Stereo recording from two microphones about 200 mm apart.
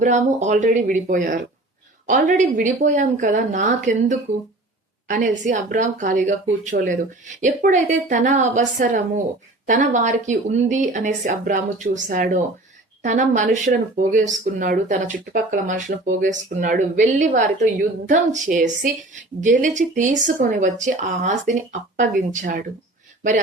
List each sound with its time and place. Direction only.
0.0 s a woman's voice: 35° right (ahead or behind)